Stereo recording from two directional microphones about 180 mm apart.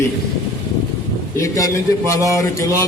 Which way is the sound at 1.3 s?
15° left (ahead or behind).